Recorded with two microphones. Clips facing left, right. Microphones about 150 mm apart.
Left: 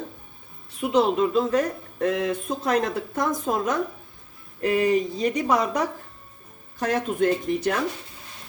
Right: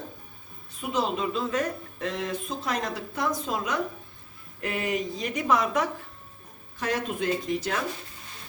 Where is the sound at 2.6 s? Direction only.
50° left (ahead or behind).